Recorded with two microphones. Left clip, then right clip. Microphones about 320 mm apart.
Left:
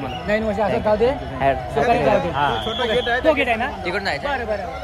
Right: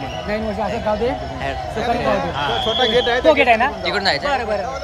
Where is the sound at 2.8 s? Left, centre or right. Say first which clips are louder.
Right 5 dB; right.